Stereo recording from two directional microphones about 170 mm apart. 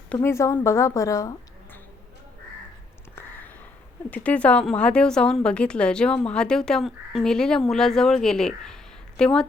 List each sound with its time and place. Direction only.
0.1 s speech: 15° left (ahead or behind)
4.1 s a woman's voice: 10° left (ahead or behind)